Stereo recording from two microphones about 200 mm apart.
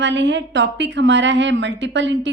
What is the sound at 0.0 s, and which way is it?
A woman's voice, 65° right (ahead or behind).